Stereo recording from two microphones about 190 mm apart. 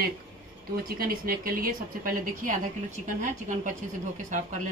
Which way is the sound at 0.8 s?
50° right (ahead or behind).